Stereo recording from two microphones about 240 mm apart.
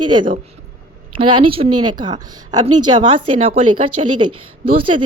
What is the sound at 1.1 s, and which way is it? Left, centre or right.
A woman's voice, right.